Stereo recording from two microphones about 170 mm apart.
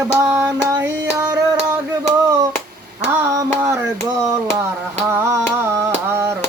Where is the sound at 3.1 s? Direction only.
20° right (ahead or behind).